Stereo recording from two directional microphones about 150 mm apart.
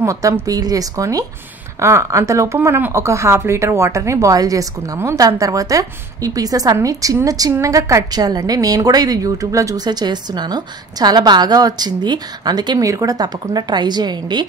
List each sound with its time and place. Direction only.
0.0 s a woman's voice: 20° right (ahead or behind)